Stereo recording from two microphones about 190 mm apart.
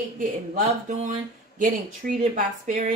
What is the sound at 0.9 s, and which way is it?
Speech, 40° right (ahead or behind).